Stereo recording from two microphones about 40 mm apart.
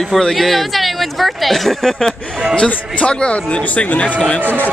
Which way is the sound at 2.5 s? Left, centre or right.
Left.